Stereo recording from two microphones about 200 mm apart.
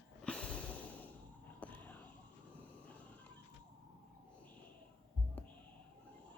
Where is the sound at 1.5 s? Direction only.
5° left (ahead or behind).